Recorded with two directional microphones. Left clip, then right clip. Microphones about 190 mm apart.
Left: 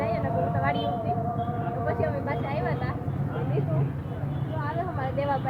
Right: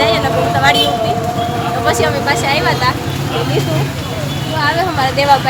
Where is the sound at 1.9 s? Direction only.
20° right (ahead or behind).